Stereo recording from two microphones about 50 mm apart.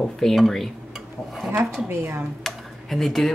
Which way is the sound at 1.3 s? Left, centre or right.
Centre.